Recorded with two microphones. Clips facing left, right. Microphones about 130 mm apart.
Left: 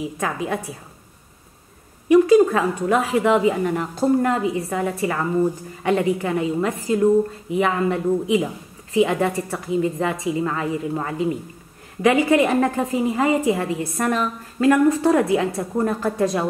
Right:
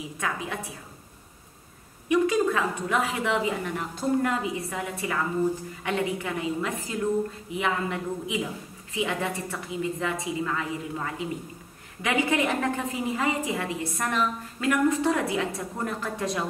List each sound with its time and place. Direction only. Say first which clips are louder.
2.0 s a woman's voice: left 9 dB; 35° left (ahead or behind)